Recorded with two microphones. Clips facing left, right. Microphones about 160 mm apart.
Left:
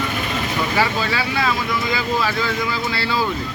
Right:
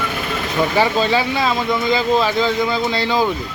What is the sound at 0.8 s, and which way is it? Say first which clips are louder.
Speech: right 5 dB; 20° right (ahead or behind).